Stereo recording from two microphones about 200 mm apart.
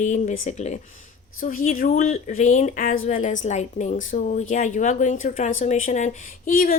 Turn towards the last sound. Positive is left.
turn(degrees=45)  # may be behind; listen again after turning